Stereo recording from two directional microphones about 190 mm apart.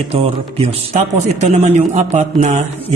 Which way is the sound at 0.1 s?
35° right (ahead or behind).